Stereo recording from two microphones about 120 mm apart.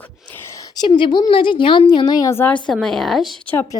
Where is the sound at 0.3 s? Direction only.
20° left (ahead or behind).